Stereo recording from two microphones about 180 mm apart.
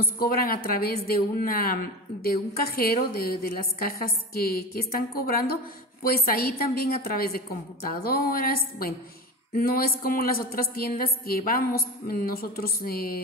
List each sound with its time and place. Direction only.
0.0 s a woman's voice: 55° left (ahead or behind)